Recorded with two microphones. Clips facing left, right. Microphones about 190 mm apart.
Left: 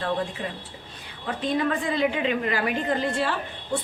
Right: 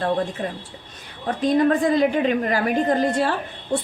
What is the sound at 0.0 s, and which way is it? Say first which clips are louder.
A woman's voice: right 5 dB; 45° right (ahead or behind).